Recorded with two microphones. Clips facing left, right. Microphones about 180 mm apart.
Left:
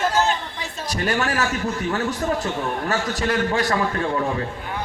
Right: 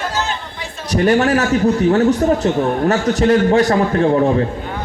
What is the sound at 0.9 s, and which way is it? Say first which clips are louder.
A man's voice: right 9 dB; 35° right (ahead or behind).